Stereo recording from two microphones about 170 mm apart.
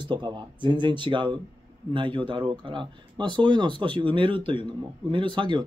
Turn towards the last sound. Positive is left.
turn(degrees=-25)  # may be behind; listen again after turning